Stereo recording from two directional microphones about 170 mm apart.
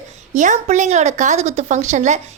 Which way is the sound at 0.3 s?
45° right (ahead or behind).